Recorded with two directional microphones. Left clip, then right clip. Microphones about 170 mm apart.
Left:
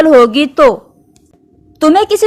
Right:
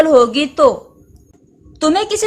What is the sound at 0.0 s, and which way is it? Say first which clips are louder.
Speech: left 4 dB; 40° left (ahead or behind).